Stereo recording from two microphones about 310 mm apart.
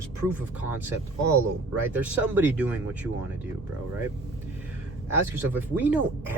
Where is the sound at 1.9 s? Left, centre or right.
Centre.